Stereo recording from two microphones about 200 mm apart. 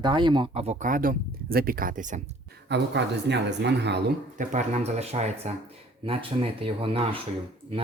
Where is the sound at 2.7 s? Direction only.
60° right (ahead or behind).